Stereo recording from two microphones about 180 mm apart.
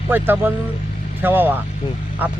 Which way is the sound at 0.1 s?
10° right (ahead or behind).